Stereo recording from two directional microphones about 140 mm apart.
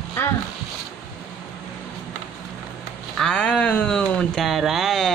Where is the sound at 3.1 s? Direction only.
5° left (ahead or behind).